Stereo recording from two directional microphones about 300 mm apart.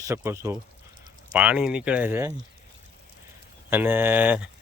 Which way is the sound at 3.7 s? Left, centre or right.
Centre.